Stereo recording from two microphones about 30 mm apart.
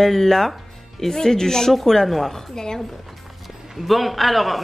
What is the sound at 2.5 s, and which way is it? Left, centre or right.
Speech, left.